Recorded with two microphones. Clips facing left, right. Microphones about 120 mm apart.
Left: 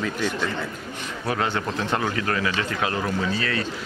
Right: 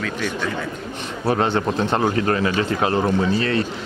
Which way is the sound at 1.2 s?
30° right (ahead or behind).